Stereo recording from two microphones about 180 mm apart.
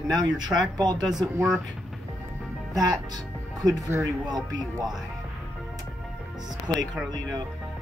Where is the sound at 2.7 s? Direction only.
20° right (ahead or behind).